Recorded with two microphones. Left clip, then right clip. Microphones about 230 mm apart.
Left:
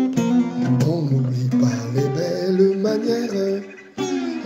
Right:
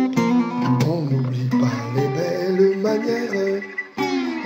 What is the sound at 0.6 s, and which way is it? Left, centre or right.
Music, right.